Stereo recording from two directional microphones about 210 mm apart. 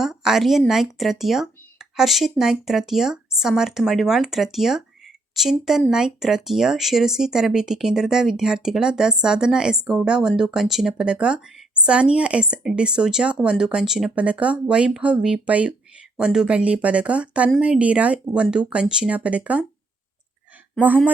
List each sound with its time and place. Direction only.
0.0 s speech: centre (ahead or behind)